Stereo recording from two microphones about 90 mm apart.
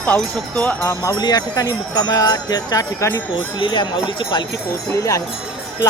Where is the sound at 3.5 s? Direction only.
60° left (ahead or behind).